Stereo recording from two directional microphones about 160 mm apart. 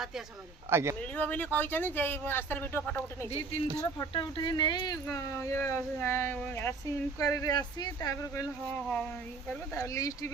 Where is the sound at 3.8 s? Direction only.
25° left (ahead or behind).